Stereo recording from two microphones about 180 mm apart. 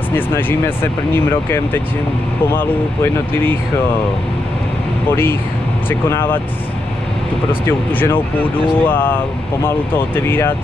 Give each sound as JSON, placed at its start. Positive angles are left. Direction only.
{"t": 0.1, "sound": "speech", "side_deg": 10}
{"t": 5.9, "sound": "speech", "side_deg": 10}
{"t": 7.6, "sound": "speech", "side_deg": 10}